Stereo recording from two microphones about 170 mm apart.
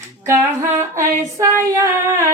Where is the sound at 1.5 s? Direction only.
15° right (ahead or behind).